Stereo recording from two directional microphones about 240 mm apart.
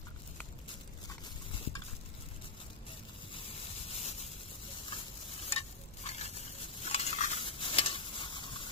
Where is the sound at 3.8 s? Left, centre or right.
Left.